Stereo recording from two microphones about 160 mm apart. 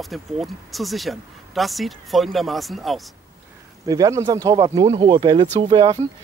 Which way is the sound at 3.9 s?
20° right (ahead or behind).